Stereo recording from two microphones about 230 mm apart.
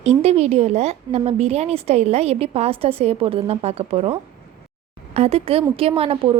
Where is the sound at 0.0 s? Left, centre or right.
Right.